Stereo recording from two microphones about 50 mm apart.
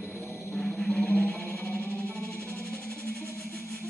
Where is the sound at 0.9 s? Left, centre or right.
Left.